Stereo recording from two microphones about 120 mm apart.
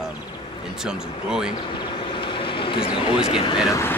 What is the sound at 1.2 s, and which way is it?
Speech, 5° right (ahead or behind).